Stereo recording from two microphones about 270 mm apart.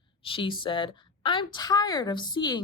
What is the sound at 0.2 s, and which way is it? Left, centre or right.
A woman's voice, centre.